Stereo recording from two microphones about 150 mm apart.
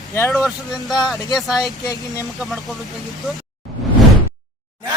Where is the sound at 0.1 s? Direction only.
15° left (ahead or behind).